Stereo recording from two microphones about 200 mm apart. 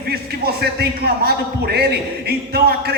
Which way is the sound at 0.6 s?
50° right (ahead or behind).